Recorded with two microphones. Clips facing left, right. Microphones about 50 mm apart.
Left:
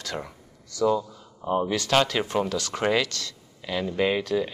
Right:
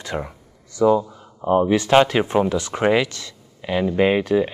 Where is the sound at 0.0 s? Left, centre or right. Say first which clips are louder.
Right 6 dB; right.